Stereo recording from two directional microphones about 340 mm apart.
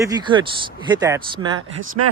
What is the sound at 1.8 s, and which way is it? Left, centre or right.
Speech, right.